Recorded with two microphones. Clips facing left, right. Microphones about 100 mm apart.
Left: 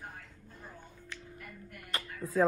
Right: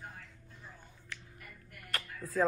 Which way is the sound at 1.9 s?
Centre (ahead or behind).